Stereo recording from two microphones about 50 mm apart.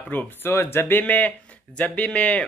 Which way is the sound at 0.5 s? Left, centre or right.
Left.